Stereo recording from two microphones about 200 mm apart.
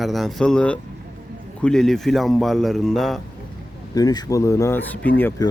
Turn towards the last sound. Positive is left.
turn(degrees=15)  # may be behind; listen again after turning